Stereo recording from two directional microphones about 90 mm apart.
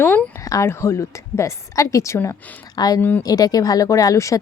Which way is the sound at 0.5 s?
30° left (ahead or behind).